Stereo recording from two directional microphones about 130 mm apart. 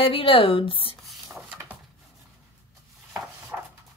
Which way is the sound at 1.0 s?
Centre (ahead or behind).